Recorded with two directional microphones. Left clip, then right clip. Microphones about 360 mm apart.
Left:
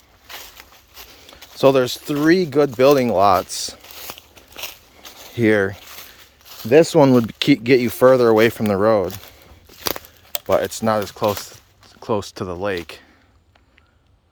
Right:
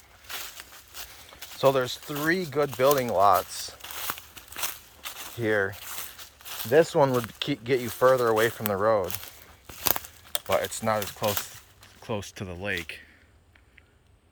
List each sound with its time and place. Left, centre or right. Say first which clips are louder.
0.6 s a sound: left 2 dB; centre
1.5 s speech: left 8 dB; left
4.0 s walk: right 1 dB; centre
5.4 s speech: left 9 dB; left
5.8 s a sound: left 1 dB; centre
6.7 s speech: left 8 dB; left
10.3 s speech: left 8 dB; left
12.0 s speech: left 11 dB; centre